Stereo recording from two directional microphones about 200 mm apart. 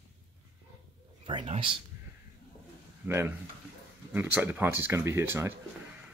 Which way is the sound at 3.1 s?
10° right (ahead or behind).